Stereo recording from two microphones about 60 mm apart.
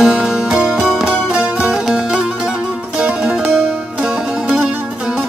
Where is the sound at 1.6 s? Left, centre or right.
Centre.